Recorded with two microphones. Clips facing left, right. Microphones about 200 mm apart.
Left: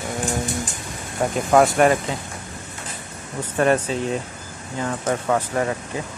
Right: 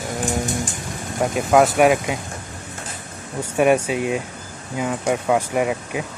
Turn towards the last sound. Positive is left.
turn(degrees=-10)  # may be behind; listen again after turning